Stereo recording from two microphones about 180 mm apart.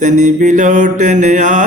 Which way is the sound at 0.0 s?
45° right (ahead or behind).